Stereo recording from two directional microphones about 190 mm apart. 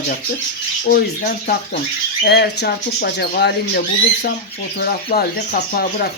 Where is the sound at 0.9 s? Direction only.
50° left (ahead or behind).